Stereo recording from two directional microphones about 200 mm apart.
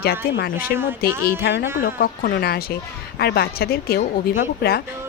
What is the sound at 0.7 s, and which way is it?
Speech, 55° left (ahead or behind).